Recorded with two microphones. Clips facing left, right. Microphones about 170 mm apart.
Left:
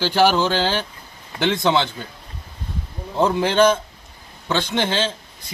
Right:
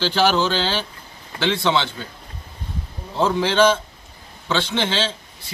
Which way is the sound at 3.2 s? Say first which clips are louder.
Left 1 dB; 15° left (ahead or behind).